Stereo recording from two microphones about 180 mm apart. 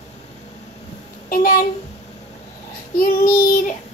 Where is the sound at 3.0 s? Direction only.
55° left (ahead or behind).